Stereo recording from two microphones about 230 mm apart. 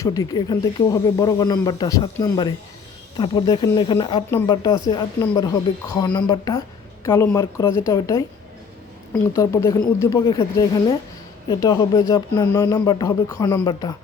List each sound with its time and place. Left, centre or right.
0.0 s speech: centre
9.3 s speech: centre